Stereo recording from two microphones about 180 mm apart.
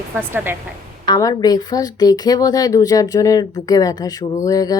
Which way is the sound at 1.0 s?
20° left (ahead or behind).